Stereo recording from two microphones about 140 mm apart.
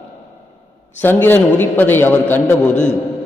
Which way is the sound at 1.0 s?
15° left (ahead or behind).